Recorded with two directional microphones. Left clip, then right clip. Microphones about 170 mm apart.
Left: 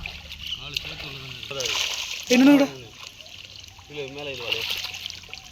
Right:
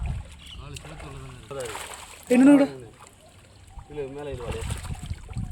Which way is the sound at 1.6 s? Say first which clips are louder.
Left 9 dB; 25° right (ahead or behind).